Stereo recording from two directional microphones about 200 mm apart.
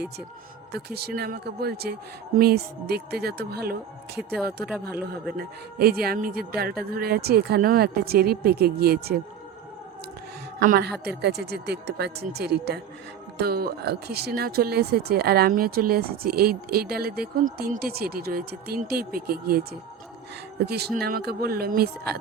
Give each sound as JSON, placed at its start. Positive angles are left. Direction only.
{"t": 0.7, "sound": "speech", "side_deg": -55}
{"t": 10.6, "sound": "speech", "side_deg": -50}